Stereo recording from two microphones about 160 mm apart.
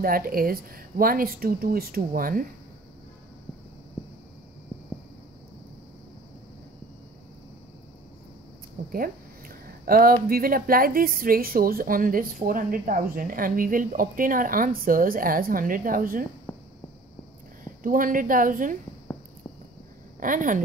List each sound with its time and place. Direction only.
0.0 s speech: 65° right (ahead or behind)
9.8 s speech: 65° right (ahead or behind)
16.5 s a sound: 10° left (ahead or behind)
17.8 s speech: 60° right (ahead or behind)
20.2 s speech: 55° right (ahead or behind)